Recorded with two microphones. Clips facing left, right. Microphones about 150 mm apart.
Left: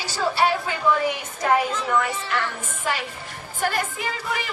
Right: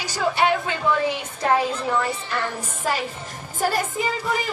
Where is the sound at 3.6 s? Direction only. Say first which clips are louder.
Right 2 dB; 40° right (ahead or behind).